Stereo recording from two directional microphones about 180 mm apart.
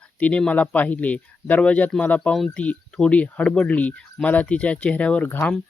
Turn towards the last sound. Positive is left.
turn(degrees=10)  # may be behind; listen again after turning